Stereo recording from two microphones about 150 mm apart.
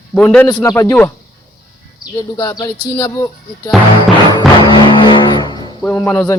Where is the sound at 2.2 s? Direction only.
25° left (ahead or behind).